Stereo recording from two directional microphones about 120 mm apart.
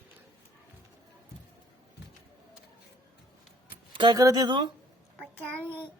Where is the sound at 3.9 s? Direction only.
40° right (ahead or behind).